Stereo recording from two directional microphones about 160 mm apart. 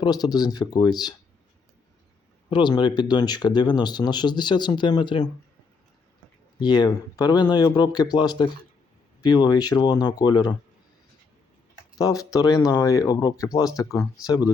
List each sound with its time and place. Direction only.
0.0 s speech: 25° left (ahead or behind)
2.5 s speech: 30° left (ahead or behind)
6.6 s speech: 25° left (ahead or behind)
11.9 s speech: 20° left (ahead or behind)